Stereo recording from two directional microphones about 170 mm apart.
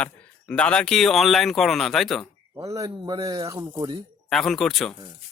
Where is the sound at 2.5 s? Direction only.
20° right (ahead or behind).